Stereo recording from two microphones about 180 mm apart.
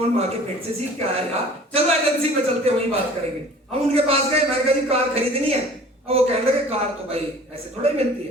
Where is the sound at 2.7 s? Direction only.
35° right (ahead or behind).